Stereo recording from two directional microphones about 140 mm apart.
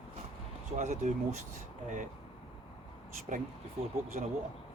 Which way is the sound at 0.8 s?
60° right (ahead or behind).